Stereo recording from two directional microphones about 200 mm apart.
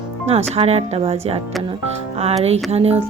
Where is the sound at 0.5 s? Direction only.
30° right (ahead or behind).